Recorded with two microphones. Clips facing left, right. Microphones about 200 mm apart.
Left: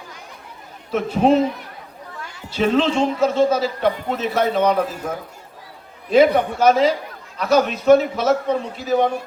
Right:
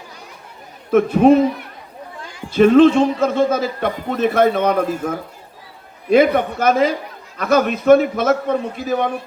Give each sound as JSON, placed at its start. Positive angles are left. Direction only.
{"t": 0.9, "sound": "a man's voice", "side_deg": -55}
{"t": 2.5, "sound": "a man's voice", "side_deg": -55}
{"t": 6.1, "sound": "a man's voice", "side_deg": -55}